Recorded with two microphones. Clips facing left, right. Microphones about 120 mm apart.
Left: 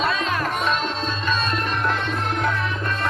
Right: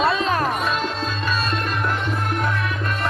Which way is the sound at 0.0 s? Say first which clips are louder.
Right 3 dB; 35° right (ahead or behind).